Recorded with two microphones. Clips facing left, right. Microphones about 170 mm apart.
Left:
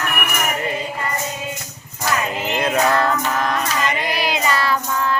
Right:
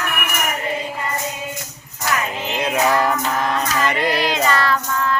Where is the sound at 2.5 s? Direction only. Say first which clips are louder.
Even; 5° right (ahead or behind).